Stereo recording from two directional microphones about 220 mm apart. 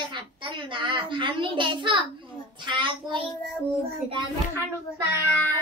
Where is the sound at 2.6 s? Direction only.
20° right (ahead or behind).